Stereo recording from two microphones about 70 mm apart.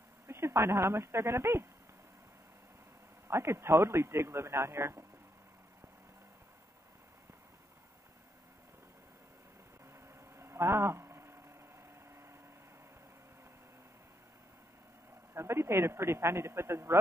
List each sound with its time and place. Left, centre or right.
0.3 s speech: right
3.3 s a man's voice: right
10.0 s a sound: right
15.3 s a man's voice: right